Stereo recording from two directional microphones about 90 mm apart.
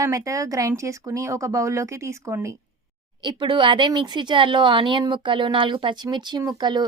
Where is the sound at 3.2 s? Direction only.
60° right (ahead or behind).